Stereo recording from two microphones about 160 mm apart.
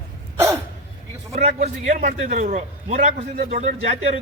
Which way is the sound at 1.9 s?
55° right (ahead or behind).